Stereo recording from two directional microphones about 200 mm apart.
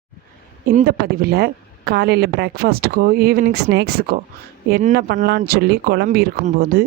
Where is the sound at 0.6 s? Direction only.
45° right (ahead or behind).